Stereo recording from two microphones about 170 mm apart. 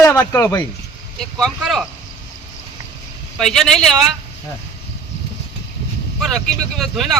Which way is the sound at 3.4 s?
Centre (ahead or behind).